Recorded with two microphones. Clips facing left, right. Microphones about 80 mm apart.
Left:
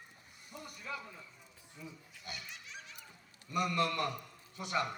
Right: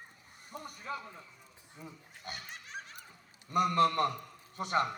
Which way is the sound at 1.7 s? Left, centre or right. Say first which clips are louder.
Right 1 dB; right.